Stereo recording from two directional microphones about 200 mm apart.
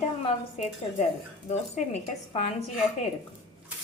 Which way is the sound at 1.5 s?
35° left (ahead or behind).